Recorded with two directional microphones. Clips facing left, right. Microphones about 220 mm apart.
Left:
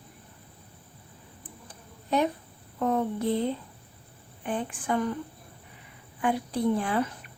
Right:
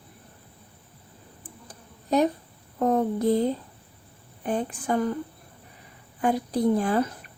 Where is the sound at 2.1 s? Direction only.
40° right (ahead or behind).